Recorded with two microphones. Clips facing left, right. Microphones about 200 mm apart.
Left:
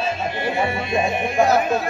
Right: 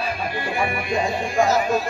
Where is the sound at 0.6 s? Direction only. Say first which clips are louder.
Left 1 dB; 25° left (ahead or behind).